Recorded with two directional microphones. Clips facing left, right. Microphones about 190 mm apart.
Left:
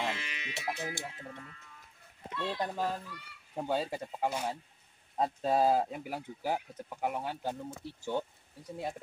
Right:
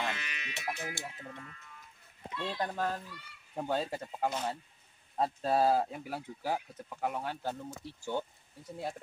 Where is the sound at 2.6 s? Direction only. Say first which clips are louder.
Even; 10° left (ahead or behind).